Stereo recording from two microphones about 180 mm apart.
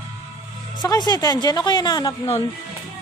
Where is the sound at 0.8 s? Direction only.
20° left (ahead or behind).